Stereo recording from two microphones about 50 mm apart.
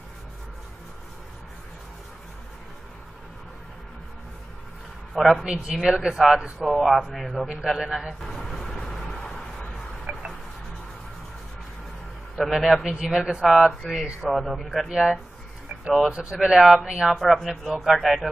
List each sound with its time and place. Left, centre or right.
5.4 s a man's voice: centre
7.6 s speech: centre
8.1 s vehicle: centre
10.1 s music: right
12.4 s speech: centre
13.5 s a man's voice: centre
17.2 s a man's voice: centre